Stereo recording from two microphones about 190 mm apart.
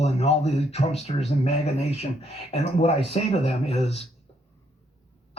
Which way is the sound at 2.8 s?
35° left (ahead or behind).